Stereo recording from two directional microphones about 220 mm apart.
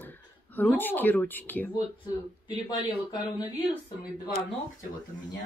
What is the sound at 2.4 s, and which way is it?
Speech, 20° left (ahead or behind).